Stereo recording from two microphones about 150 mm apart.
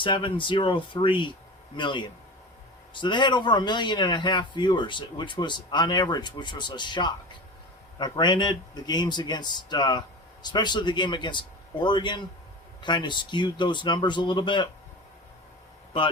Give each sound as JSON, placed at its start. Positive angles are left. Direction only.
{"t": 0.0, "sound": "a man's voice", "side_deg": 35}